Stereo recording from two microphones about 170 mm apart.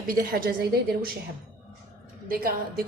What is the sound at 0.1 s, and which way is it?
A woman's voice, 55° right (ahead or behind).